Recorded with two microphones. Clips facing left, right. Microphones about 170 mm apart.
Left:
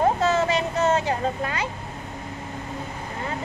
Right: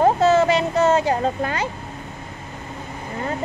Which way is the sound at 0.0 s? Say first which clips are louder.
Right 5 dB; 30° right (ahead or behind).